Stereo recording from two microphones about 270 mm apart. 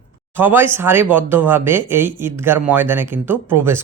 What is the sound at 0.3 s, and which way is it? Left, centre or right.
Speech, centre.